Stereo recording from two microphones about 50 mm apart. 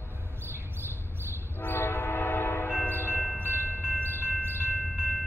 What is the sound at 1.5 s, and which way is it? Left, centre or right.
Train, left.